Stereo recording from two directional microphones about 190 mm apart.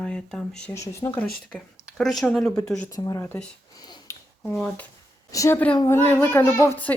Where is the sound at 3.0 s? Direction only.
20° left (ahead or behind).